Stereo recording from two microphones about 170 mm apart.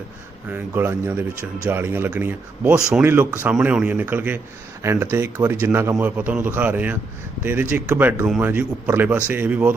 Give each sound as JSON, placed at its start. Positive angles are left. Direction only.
{"t": 0.5, "sound": "speech", "side_deg": -10}